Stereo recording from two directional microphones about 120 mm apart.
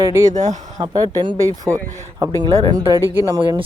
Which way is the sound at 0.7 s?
35° right (ahead or behind).